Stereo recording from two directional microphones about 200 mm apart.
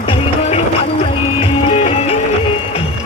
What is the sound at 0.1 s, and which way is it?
Music, 30° left (ahead or behind).